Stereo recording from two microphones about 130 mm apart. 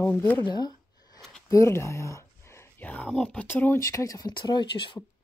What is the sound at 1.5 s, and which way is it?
Speech, 20° left (ahead or behind).